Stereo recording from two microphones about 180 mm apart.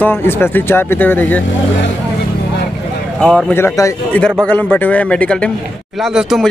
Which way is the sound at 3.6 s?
15° left (ahead or behind).